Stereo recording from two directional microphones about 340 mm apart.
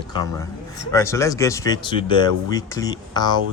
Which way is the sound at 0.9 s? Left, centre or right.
Centre.